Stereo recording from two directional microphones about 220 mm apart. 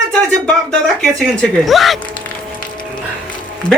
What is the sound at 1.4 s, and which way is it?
Speech, centre (ahead or behind).